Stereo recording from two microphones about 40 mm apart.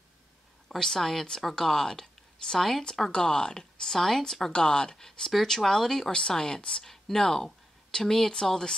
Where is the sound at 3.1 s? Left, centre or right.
Left.